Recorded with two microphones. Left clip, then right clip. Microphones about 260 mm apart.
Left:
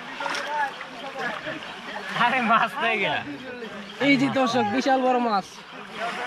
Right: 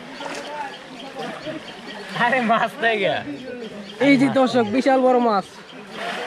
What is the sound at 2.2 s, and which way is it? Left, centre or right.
Speech, centre.